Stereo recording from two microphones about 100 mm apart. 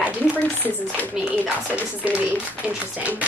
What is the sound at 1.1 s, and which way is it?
A woman's voice, 15° right (ahead or behind).